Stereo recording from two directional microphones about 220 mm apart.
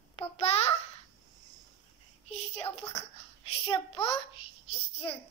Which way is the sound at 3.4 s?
25° left (ahead or behind).